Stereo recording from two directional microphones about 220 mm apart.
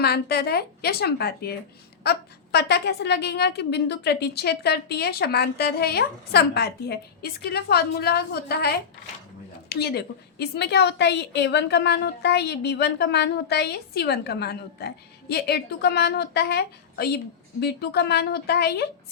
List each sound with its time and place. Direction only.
0.0 s a woman's voice: 45° left (ahead or behind)